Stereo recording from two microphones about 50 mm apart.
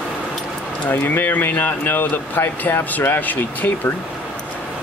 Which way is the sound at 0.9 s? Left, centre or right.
Left.